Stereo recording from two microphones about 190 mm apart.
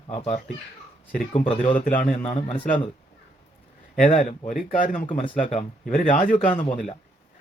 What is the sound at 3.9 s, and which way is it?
Speech, 45° left (ahead or behind).